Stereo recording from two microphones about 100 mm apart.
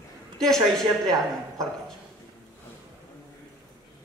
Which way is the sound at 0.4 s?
5° left (ahead or behind).